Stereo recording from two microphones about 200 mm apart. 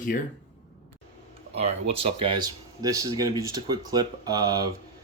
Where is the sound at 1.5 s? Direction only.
30° right (ahead or behind).